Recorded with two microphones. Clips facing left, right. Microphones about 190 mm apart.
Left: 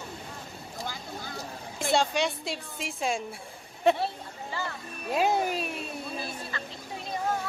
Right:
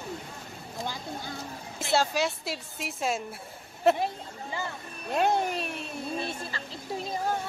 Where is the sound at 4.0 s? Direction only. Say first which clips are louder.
Right 1 dB; 15° right (ahead or behind).